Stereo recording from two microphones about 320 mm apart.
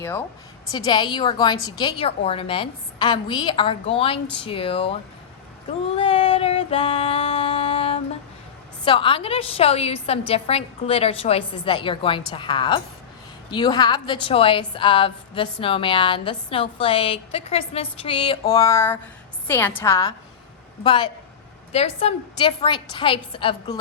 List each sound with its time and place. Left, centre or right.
0.7 s a woman's voice: centre
6.0 s female singing: centre
8.8 s a woman's voice: centre